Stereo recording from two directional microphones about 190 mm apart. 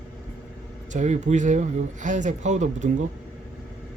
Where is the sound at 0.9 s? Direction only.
40° right (ahead or behind).